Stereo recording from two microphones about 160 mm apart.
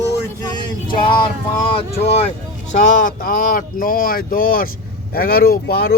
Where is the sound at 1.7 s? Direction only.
40° left (ahead or behind).